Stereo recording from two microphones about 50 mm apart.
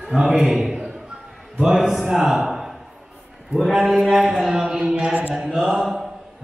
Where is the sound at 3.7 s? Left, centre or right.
Centre; by 5.3 s right.